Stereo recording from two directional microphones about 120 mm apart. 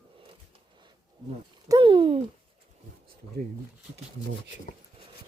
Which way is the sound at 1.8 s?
45° right (ahead or behind).